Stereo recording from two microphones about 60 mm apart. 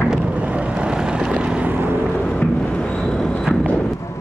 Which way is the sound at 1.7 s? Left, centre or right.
Right.